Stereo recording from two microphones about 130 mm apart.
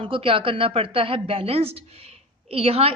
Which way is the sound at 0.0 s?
40° right (ahead or behind).